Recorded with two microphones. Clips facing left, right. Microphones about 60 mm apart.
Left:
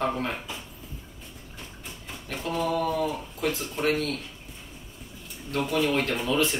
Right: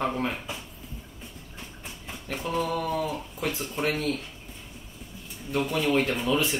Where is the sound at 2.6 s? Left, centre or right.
Centre.